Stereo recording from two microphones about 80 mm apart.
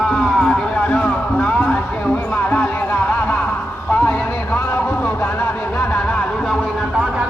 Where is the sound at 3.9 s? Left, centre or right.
Left.